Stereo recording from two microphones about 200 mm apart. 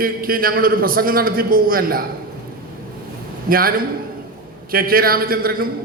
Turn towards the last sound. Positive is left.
turn(degrees=-45)  # may be behind; listen again after turning